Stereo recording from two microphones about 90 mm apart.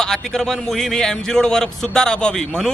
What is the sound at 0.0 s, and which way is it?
A man's voice, 5° left (ahead or behind).